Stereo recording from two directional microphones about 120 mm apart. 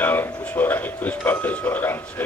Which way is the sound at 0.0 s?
15° left (ahead or behind).